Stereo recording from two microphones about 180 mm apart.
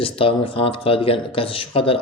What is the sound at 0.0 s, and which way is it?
Speech, 30° left (ahead or behind).